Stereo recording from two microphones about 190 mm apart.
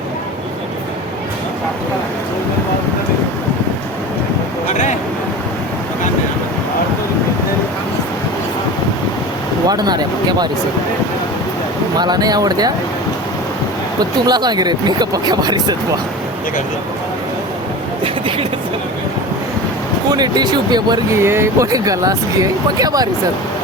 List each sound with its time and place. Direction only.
4.7 s a sound: 40° left (ahead or behind)
9.6 s speech: 20° right (ahead or behind)
11.9 s speech: 20° right (ahead or behind)
14.0 s speech: 20° right (ahead or behind)
18.0 s a sound: 30° right (ahead or behind)
20.1 s speech: 20° right (ahead or behind)